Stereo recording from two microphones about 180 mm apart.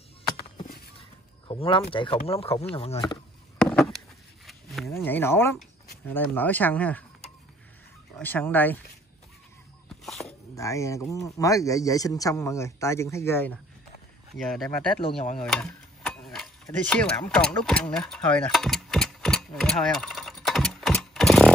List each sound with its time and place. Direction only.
1.5 s speech: 30° left (ahead or behind)
3.5 s a sound: 5° left (ahead or behind)
4.9 s a man's voice: 10° left (ahead or behind)
8.2 s a man's voice: 10° left (ahead or behind)
10.0 s dog: centre (ahead or behind)
10.5 s a man's voice: 15° left (ahead or behind); by 14.9 s centre (ahead or behind)
15.3 s stir: centre (ahead or behind)
16.8 s a sound: 5° left (ahead or behind)